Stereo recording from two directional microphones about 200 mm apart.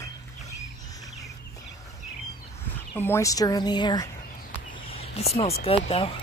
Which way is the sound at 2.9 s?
15° left (ahead or behind).